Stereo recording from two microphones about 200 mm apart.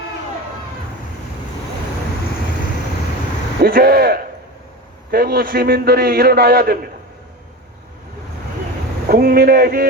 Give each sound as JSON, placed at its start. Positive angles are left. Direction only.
{"t": 3.6, "sound": "a man's voice", "side_deg": -50}
{"t": 9.0, "sound": "a man's voice", "side_deg": -45}